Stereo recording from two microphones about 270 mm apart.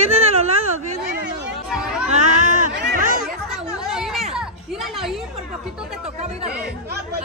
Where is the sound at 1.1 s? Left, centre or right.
Right.